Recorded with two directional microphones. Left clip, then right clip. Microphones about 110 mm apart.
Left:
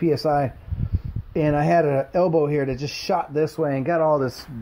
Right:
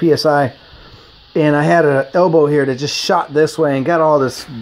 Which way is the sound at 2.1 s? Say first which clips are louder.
Right 8 dB; 35° right (ahead or behind).